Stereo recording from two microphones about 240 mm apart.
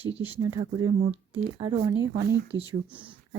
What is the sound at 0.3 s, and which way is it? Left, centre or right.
Speech, centre.